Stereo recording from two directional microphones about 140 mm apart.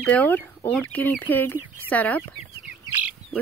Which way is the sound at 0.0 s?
10° left (ahead or behind).